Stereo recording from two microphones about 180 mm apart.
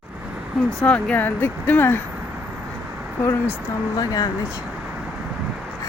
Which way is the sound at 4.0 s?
20° left (ahead or behind).